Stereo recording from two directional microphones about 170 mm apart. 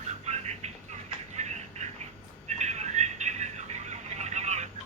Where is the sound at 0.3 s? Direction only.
40° right (ahead or behind).